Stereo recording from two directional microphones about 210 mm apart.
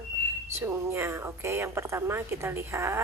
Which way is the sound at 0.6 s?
10° right (ahead or behind).